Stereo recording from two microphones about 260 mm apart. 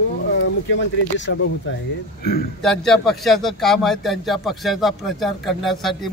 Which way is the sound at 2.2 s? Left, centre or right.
Left.